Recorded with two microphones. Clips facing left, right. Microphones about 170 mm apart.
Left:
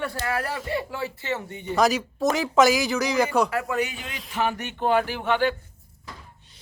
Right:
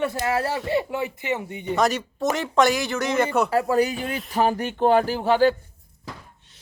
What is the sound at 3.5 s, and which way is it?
Speech, 35° right (ahead or behind).